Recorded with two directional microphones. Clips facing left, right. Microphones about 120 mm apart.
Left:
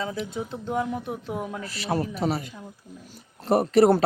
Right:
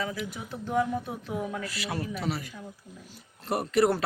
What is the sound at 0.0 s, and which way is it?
Speech, 25° left (ahead or behind).